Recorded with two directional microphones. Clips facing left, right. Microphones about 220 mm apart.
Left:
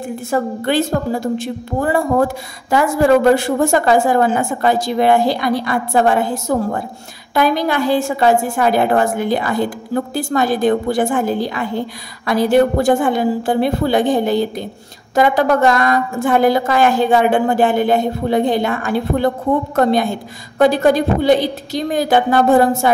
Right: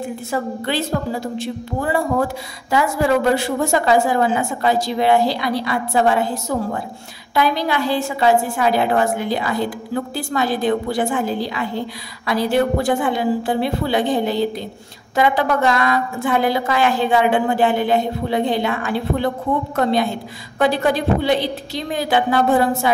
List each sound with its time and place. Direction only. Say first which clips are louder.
0.3 s a woman's voice: left 6 dB; 50° left (ahead or behind)